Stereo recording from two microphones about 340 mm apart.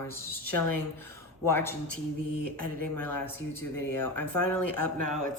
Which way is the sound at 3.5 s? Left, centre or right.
Centre.